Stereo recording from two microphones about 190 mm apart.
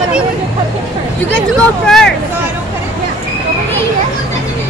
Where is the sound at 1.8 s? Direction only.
5° left (ahead or behind).